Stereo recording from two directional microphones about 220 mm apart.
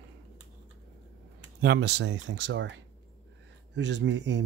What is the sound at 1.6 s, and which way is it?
Speech, 50° right (ahead or behind).